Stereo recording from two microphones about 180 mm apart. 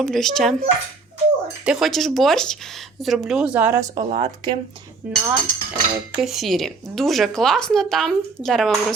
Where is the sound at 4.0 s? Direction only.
30° right (ahead or behind).